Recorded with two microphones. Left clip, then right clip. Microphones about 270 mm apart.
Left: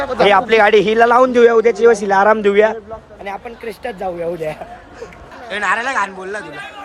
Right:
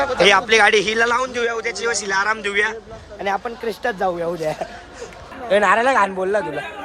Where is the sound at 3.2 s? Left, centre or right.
Centre.